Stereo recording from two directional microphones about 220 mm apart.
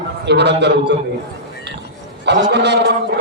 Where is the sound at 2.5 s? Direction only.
50° right (ahead or behind).